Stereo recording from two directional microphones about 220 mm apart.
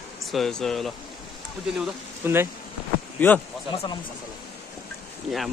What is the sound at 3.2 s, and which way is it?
Speech, 10° left (ahead or behind).